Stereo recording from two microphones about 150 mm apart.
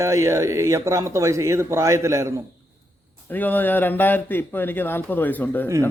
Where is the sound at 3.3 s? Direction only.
10° left (ahead or behind).